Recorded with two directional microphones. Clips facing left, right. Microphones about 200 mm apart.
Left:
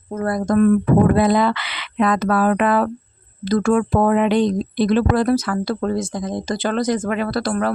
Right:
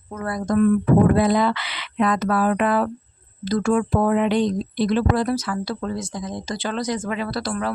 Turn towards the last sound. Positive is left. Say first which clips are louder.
# left 5 dB
turn(degrees=55)  # may be behind; listen again after turning